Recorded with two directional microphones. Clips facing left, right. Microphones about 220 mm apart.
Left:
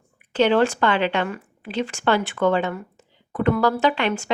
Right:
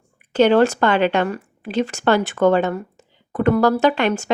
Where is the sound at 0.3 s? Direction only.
45° right (ahead or behind).